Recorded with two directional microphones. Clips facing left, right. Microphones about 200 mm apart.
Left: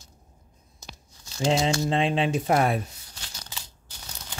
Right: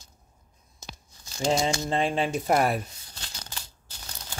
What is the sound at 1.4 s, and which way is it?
Speech, centre (ahead or behind).